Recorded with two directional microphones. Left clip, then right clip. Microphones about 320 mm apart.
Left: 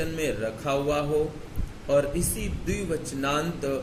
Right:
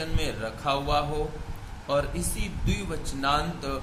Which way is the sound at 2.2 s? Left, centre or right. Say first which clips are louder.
Left 2 dB; right.